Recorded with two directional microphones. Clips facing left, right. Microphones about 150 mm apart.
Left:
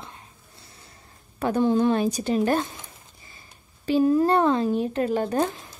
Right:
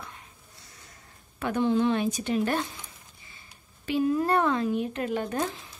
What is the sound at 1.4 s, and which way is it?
Speech, 40° left (ahead or behind).